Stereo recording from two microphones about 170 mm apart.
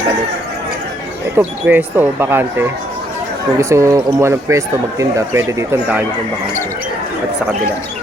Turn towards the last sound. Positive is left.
turn(degrees=-10)  # may be behind; listen again after turning